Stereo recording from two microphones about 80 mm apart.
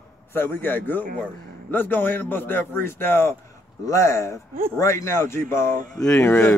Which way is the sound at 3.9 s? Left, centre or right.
Left.